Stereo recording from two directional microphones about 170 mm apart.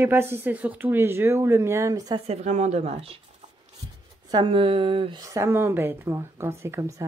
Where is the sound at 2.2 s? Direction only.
40° right (ahead or behind).